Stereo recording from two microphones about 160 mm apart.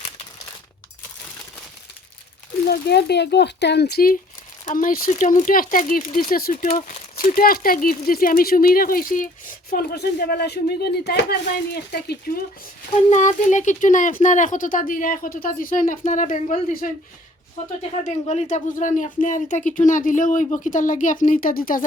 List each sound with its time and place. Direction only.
2.6 s speech: 90° left; by 4.2 s 70° left (ahead or behind)
4.6 s speech: 55° left (ahead or behind)
6.7 s speech: 55° left (ahead or behind); by 12.4 s 80° left
13.1 s speech: 50° left (ahead or behind)
18.0 s speech: 50° left (ahead or behind)